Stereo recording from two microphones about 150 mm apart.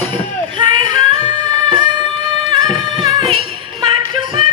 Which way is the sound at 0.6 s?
35° right (ahead or behind).